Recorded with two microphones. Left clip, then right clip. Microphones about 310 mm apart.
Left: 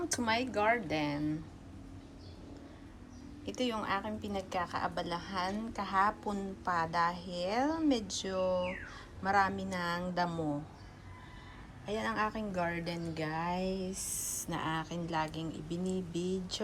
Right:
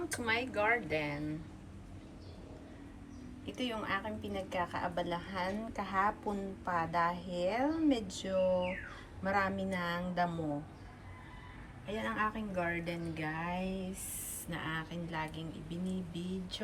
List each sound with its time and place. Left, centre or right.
0.2 s speech: centre
3.4 s a woman's voice: centre
8.4 s speech: centre
9.2 s a woman's voice: centre
11.9 s a woman's voice: centre